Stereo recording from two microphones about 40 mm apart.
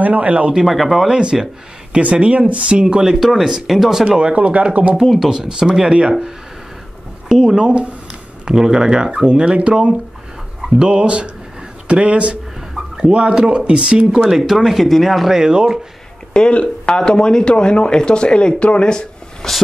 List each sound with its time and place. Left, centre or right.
0.0 s speech: right
0.7 s speech: centre
1.1 s speech: centre
2.0 s speech: right
3.2 s speech: centre
4.2 s speech: right
5.0 s speech: centre
5.3 s speech: centre
7.2 s a sound: centre
8.5 s speech: centre
14.3 s speech: centre
15.3 s speech: centre
16.3 s speech: left